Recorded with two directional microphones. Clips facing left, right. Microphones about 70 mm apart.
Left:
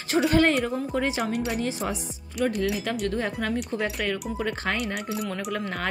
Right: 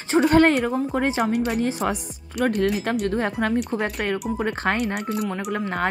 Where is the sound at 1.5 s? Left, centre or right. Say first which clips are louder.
Right 5 dB; right.